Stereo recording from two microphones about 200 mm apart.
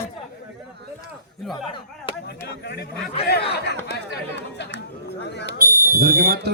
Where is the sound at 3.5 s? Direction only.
55° left (ahead or behind).